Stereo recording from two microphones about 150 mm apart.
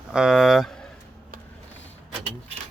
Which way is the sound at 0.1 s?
5° right (ahead or behind).